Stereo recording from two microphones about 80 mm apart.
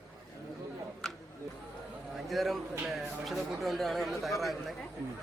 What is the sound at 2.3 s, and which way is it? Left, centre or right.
A man's voice, centre.